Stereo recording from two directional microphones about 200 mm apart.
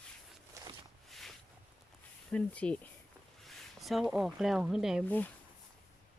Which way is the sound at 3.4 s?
Centre (ahead or behind).